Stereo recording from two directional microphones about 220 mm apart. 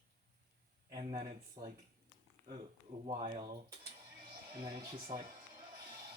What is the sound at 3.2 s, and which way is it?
Speech, 30° right (ahead or behind).